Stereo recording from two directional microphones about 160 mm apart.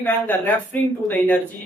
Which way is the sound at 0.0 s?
10° left (ahead or behind).